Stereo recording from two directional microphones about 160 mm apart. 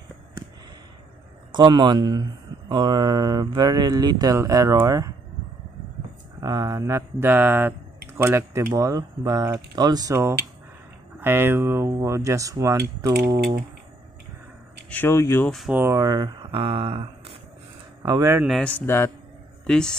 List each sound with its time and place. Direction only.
1.5 s speech: 30° right (ahead or behind)
6.4 s mantra: 20° right (ahead or behind)
8.1 s speech: 15° right (ahead or behind)
14.9 s speech: 15° left (ahead or behind)
15.7 s speech: 15° right (ahead or behind); by 17.4 s 35° right (ahead or behind)
18.0 s speech: 20° right (ahead or behind)
18.4 s speech: 5° left (ahead or behind)
19.6 s speech: 5° left (ahead or behind)